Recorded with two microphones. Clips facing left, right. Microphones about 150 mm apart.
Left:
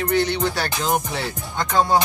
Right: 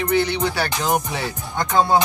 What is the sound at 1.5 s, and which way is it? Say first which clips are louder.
Music: right 1 dB; 25° right (ahead or behind).